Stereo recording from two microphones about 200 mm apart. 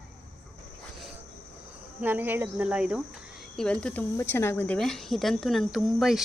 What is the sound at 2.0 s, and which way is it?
Speech, 10° right (ahead or behind).